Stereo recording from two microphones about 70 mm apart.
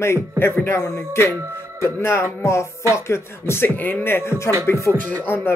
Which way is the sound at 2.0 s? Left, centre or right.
Left.